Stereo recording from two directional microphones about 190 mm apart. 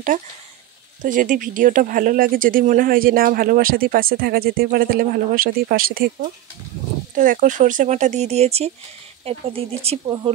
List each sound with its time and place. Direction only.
1.0 s speech: 45° right (ahead or behind); by 10.3 s 25° right (ahead or behind)